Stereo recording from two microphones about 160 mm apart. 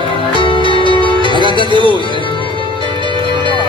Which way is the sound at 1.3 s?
30° right (ahead or behind).